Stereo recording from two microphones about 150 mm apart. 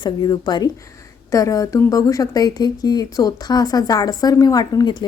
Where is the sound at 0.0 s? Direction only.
30° left (ahead or behind).